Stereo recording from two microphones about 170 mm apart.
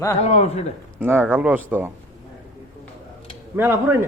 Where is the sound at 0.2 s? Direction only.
40° left (ahead or behind).